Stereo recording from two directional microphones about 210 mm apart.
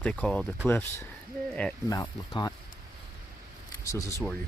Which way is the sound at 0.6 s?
10° left (ahead or behind).